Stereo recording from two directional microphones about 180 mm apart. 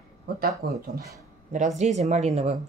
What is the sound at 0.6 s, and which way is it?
Speech, 60° right (ahead or behind).